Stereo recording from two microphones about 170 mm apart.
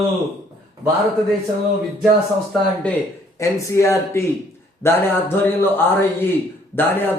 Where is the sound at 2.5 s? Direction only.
5° left (ahead or behind).